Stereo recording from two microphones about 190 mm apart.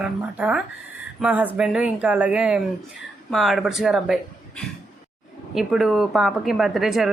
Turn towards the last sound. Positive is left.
turn(degrees=0)  # may be behind; listen again after turning